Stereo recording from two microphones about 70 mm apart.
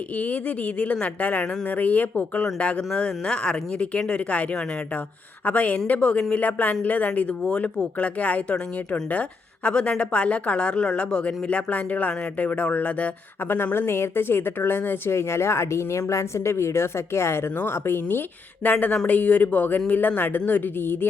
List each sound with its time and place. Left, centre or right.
0.2 s speech: centre
13.5 s speech: left